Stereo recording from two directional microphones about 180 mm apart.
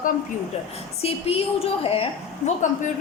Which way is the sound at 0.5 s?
35° left (ahead or behind).